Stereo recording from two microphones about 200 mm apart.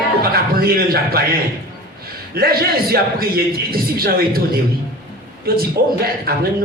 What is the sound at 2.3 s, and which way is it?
Speech, 50° right (ahead or behind).